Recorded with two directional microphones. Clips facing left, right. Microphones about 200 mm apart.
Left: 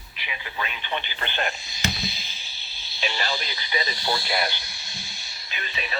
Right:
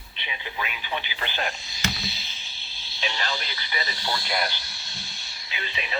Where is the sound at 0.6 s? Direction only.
5° right (ahead or behind).